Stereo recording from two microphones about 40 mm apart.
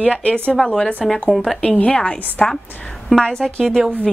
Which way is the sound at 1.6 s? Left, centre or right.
Left.